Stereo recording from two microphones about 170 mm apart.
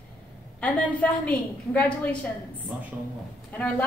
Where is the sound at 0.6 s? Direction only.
10° left (ahead or behind).